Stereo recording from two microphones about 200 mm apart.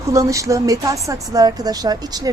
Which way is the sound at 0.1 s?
15° right (ahead or behind).